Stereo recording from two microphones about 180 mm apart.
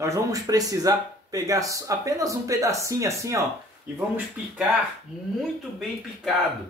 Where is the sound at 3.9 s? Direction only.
Centre (ahead or behind).